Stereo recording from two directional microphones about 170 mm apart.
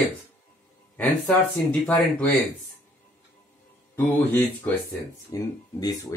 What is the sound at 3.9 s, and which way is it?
Speech, 10° left (ahead or behind).